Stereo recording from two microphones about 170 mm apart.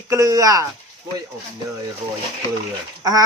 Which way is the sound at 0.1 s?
20° right (ahead or behind).